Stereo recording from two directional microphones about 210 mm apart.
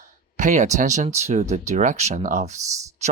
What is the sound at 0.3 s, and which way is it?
Speech, 35° right (ahead or behind).